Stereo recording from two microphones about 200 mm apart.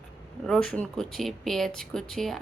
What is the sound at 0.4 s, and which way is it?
Speech, centre (ahead or behind).